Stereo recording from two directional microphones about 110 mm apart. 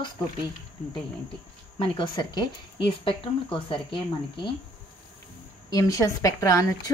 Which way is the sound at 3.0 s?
50° left (ahead or behind).